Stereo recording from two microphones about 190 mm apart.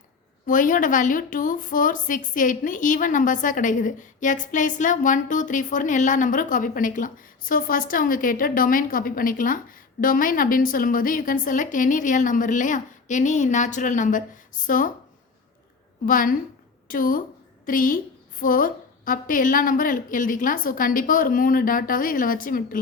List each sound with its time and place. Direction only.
0.4 s a woman's voice: 45° left (ahead or behind)
16.0 s a woman's voice: 45° left (ahead or behind)